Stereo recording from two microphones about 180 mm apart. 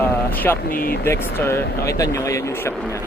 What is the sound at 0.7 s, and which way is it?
Speech, 55° left (ahead or behind).